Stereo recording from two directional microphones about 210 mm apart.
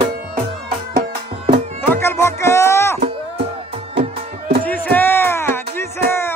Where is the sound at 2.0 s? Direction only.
10° left (ahead or behind).